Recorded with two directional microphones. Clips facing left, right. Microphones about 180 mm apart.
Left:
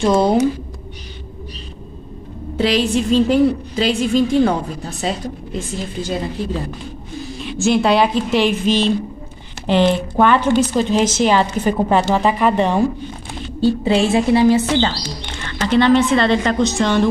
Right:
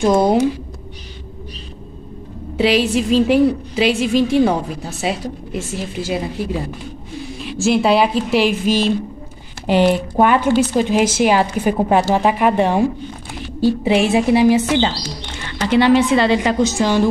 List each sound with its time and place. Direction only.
0.0 s speech: 20° right (ahead or behind)
2.5 s a woman's voice: 5° right (ahead or behind)